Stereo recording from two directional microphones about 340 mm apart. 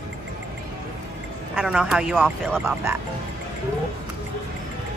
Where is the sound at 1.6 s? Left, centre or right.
Centre.